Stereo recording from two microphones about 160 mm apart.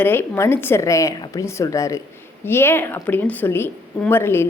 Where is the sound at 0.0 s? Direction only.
15° left (ahead or behind).